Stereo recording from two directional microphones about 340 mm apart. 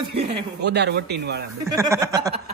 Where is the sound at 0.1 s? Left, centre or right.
Right.